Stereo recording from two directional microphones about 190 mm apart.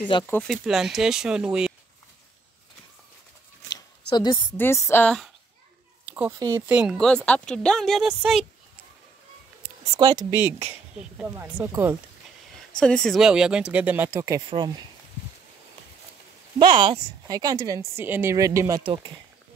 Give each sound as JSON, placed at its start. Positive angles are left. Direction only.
{"t": 0.3, "sound": "speech", "side_deg": 0}
{"t": 3.7, "sound": "zipper", "side_deg": 20}
{"t": 4.6, "sound": "speech", "side_deg": 15}
{"t": 6.0, "sound": "speech", "side_deg": -10}
{"t": 9.9, "sound": "speech", "side_deg": -20}
{"t": 10.4, "sound": "a woman's voice", "side_deg": -10}
{"t": 12.7, "sound": "speech", "side_deg": 5}
{"t": 16.5, "sound": "a woman's voice", "side_deg": -25}